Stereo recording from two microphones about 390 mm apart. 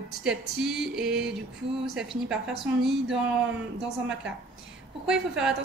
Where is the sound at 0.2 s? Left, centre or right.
Centre.